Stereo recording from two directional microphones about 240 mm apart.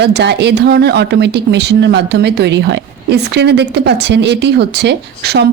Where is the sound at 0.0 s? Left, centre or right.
Right.